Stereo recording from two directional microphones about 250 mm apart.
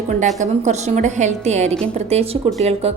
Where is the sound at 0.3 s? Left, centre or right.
Right.